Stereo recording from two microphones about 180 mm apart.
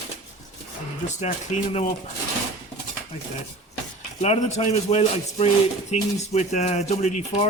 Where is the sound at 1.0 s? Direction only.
40° left (ahead or behind).